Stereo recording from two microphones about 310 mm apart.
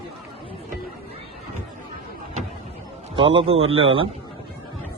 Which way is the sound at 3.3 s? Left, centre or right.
Centre.